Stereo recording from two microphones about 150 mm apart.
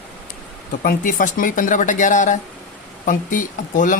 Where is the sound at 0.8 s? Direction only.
70° left (ahead or behind).